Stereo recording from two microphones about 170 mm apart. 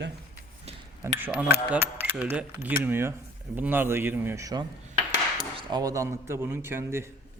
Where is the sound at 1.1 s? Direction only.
10° right (ahead or behind).